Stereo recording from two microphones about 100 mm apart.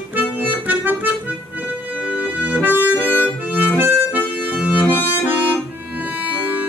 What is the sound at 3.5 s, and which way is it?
Accordion, 20° right (ahead or behind).